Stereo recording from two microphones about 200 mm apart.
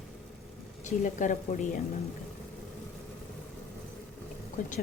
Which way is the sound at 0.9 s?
40° left (ahead or behind).